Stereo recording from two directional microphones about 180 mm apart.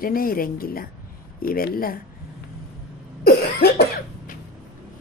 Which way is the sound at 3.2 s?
60° left (ahead or behind).